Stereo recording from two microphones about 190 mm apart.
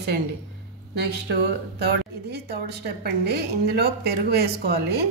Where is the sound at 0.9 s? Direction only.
60° right (ahead or behind).